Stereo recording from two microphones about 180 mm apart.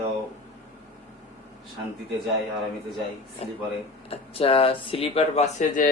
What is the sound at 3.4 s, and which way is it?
Speech, 35° left (ahead or behind).